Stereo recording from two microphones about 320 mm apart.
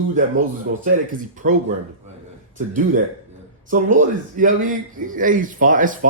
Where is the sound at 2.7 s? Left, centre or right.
Right.